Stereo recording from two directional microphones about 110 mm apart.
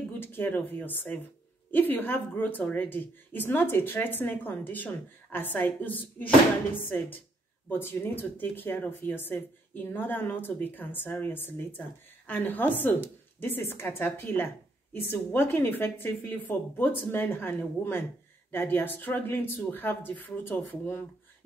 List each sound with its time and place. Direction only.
0.2 s a woman's voice: 20° left (ahead or behind)